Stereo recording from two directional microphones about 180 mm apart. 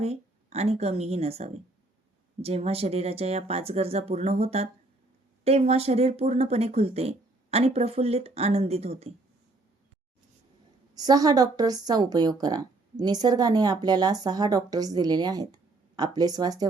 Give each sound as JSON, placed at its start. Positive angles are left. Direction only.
{"t": 0.0, "sound": "a woman's voice", "side_deg": -35}
{"t": 10.9, "sound": "a woman's voice", "side_deg": -20}